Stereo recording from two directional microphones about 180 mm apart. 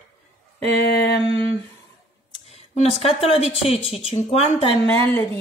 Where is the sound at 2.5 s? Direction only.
35° left (ahead or behind).